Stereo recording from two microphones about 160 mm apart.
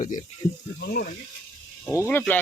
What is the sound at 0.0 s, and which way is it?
Speech, 55° left (ahead or behind).